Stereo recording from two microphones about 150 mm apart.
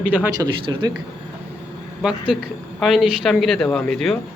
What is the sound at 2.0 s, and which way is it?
Speech, 5° right (ahead or behind).